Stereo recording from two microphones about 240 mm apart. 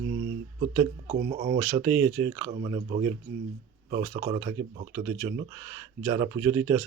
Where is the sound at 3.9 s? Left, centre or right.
Right.